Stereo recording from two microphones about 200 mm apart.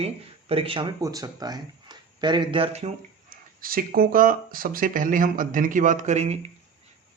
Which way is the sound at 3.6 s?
45° right (ahead or behind).